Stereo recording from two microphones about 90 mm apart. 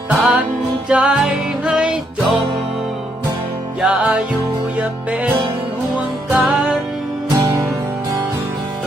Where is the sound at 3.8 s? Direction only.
15° right (ahead or behind).